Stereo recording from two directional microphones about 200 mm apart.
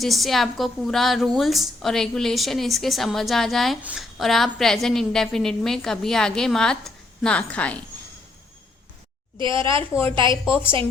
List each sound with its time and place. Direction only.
0.0 s a woman's voice: centre (ahead or behind)
9.4 s a woman's voice: 25° right (ahead or behind)
10.4 s a woman's voice: 10° left (ahead or behind)